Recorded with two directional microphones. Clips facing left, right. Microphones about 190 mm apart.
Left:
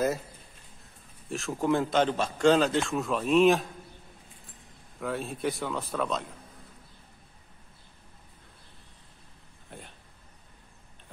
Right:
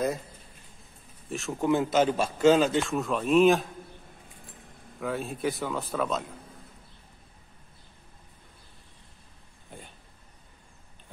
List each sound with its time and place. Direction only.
1.3 s a man's voice: centre (ahead or behind)
5.0 s a man's voice: centre (ahead or behind)
9.7 s a sound: centre (ahead or behind)